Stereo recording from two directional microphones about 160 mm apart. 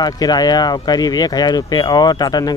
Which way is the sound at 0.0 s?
25° left (ahead or behind).